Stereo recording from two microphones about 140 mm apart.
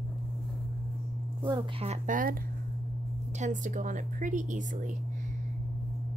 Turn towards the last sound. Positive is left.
turn(degrees=-65)  # may be behind; listen again after turning